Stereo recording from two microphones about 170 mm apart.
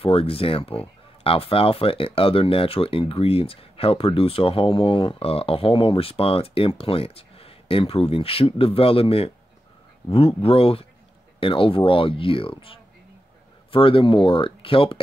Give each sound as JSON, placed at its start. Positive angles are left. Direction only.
{"t": 0.0, "sound": "speech", "side_deg": 35}